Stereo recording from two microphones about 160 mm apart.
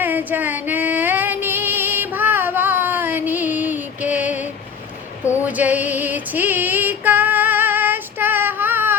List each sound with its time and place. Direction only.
0.0 s music: 10° right (ahead or behind)
5.2 s a sound: 15° left (ahead or behind)
5.5 s female singing: 10° right (ahead or behind)